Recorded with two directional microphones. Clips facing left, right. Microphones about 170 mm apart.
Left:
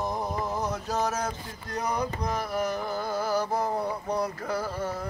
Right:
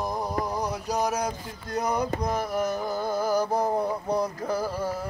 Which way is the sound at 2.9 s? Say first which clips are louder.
Right 4 dB; 15° right (ahead or behind).